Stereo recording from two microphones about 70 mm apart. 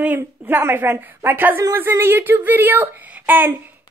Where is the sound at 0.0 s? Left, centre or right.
Right.